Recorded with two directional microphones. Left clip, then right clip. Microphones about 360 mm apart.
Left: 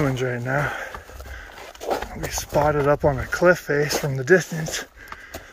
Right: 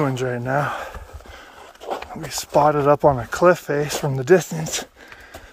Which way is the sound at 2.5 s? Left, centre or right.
Centre.